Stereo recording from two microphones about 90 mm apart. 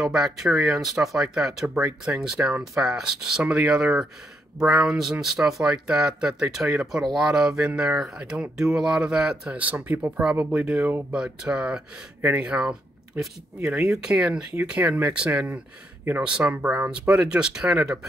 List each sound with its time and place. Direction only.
0.0 s speech: 5° right (ahead or behind)
1.7 s speech: 20° right (ahead or behind)
2.0 s speech: 10° right (ahead or behind)